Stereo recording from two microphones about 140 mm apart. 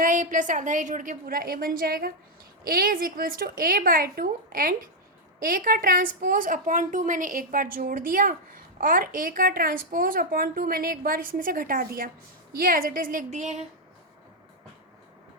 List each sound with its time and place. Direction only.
0.0 s a woman's voice: 65° right (ahead or behind)